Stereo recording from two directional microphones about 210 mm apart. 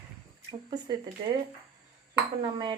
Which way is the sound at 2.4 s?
20° right (ahead or behind).